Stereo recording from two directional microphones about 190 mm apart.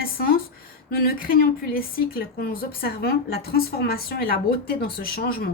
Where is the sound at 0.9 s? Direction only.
50° left (ahead or behind).